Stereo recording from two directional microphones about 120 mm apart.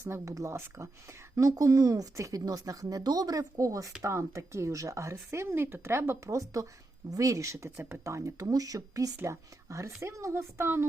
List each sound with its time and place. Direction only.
0.0 s speech: 25° right (ahead or behind)